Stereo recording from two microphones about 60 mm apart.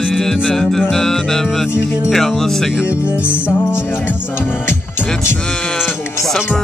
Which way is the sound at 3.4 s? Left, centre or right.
Left.